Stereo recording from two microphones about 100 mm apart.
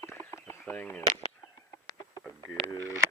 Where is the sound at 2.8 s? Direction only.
25° right (ahead or behind).